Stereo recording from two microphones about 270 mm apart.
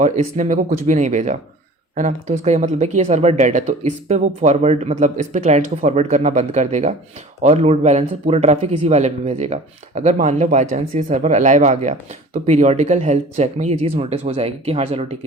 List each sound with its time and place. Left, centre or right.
0.0 s speech: right